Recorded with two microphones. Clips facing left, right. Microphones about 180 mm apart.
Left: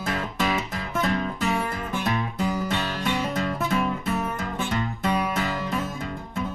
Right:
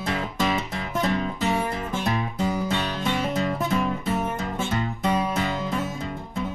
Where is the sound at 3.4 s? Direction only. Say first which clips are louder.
Right 1 dB; centre (ahead or behind).